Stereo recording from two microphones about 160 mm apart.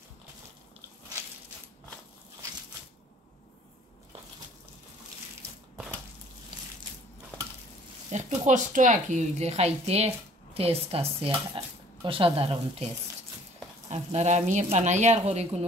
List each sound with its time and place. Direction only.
8.1 s speech: 50° right (ahead or behind)
13.8 s speech: 45° right (ahead or behind)